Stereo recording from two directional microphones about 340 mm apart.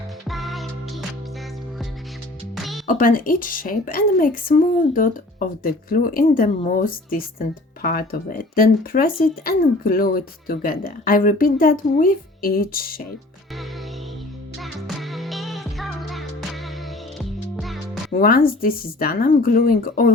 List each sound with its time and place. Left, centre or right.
0.3 s music: centre
2.6 s music: centre
2.8 s a woman's voice: left
14.6 s music: centre
18.1 s a woman's voice: left